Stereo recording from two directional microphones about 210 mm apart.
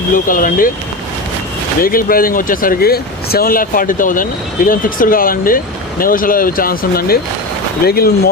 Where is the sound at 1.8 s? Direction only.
45° left (ahead or behind).